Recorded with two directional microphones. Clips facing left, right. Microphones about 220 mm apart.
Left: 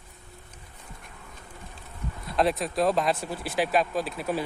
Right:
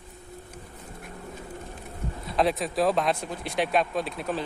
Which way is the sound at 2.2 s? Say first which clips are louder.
Even; centre (ahead or behind).